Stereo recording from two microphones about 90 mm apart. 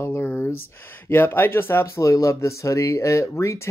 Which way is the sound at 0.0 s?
20° left (ahead or behind).